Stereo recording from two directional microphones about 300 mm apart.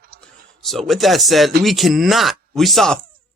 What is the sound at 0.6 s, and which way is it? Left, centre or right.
Speech, centre.